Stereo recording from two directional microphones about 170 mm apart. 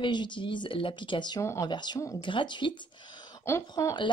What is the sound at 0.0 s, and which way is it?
Speech, 25° left (ahead or behind).